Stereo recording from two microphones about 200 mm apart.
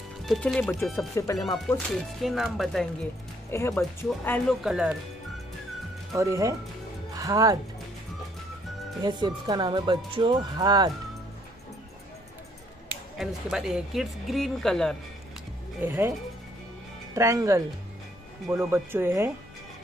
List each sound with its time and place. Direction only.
0.2 s speech: centre (ahead or behind); by 1.4 s 15° left (ahead or behind)
1.4 s speech: centre (ahead or behind)
3.4 s speech: 15° left (ahead or behind); by 4.9 s 5° right (ahead or behind)
6.1 s speech: 15° right (ahead or behind)
9.0 s speech: 20° right (ahead or behind)
13.2 s speech: centre (ahead or behind)
15.8 s speech: 10° right (ahead or behind)
17.1 s speech: 15° right (ahead or behind)